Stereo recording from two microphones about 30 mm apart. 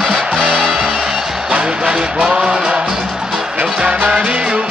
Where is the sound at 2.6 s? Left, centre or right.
Right.